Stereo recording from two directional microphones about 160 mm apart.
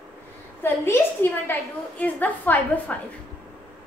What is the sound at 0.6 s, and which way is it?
A woman's voice, 15° left (ahead or behind).